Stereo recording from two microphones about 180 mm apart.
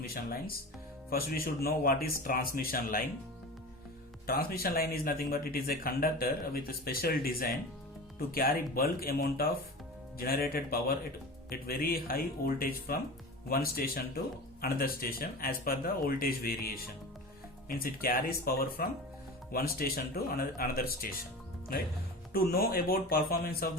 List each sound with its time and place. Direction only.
0.0 s speech: 55° left (ahead or behind)
4.3 s speech: 60° left (ahead or behind)
17.7 s speech: 55° left (ahead or behind)
22.3 s speech: 55° left (ahead or behind)